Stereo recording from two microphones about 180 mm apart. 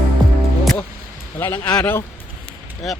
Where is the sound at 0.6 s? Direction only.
Centre (ahead or behind).